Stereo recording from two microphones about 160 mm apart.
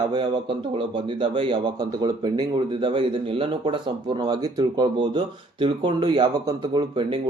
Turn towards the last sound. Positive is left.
turn(degrees=-30)  # may be behind; listen again after turning